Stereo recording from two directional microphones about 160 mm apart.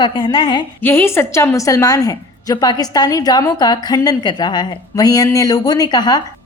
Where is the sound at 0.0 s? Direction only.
30° left (ahead or behind).